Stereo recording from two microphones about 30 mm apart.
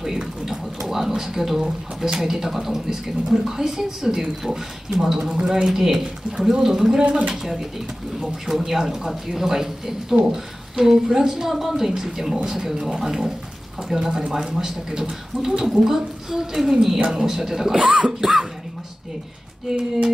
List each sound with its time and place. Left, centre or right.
0.5 s a woman's voice: centre
17.0 s speech: right
17.4 s a woman's voice: centre
17.7 s a sound: right
19.7 s a woman's voice: centre